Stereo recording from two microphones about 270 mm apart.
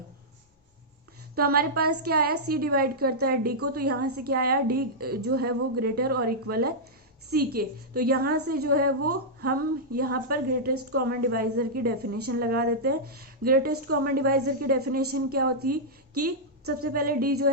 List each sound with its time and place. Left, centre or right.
1.4 s a woman's voice: right
8.9 s a woman's voice: right
9.4 s a woman's voice: right